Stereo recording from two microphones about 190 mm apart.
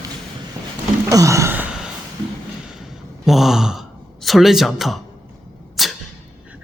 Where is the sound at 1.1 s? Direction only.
15° right (ahead or behind).